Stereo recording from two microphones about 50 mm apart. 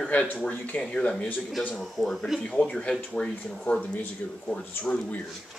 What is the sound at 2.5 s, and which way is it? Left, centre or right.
Speech, left.